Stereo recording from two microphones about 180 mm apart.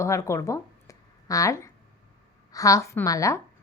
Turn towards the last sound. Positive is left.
turn(degrees=20)  # may be behind; listen again after turning